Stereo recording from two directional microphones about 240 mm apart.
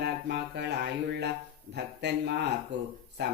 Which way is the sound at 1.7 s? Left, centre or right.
Right.